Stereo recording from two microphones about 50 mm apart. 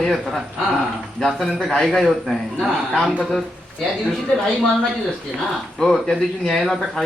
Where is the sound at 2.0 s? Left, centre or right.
Centre.